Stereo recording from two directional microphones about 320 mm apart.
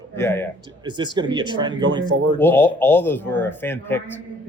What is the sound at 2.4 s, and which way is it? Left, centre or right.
Speech, centre.